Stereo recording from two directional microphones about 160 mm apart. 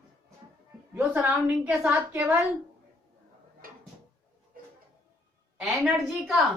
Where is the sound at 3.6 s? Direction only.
65° right (ahead or behind).